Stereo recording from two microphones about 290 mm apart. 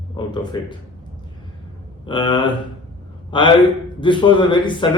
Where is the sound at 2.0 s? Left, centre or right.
Centre.